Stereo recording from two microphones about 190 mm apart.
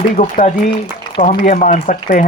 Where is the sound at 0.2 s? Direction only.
40° left (ahead or behind).